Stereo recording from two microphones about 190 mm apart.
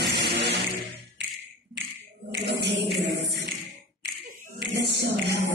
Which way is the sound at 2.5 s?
65° right (ahead or behind).